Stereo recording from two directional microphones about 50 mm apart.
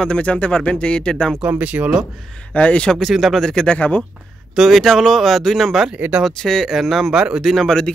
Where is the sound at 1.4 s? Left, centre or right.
Right.